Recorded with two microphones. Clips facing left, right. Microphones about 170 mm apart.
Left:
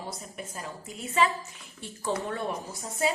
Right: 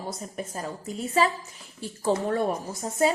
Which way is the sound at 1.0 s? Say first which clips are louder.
Right 2 dB; 35° right (ahead or behind).